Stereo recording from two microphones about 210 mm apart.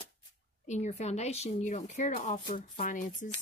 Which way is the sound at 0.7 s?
35° left (ahead or behind).